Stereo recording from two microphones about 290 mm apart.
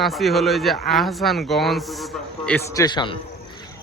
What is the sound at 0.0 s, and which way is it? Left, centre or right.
A man's voice, centre.